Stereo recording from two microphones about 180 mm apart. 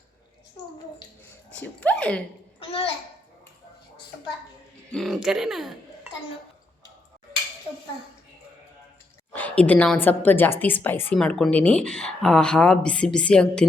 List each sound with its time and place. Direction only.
1.5 s speech: 5° left (ahead or behind)
2.6 s a child's voice: 30° left (ahead or behind)
4.9 s speech: centre (ahead or behind)
9.3 s a woman's voice: 10° left (ahead or behind)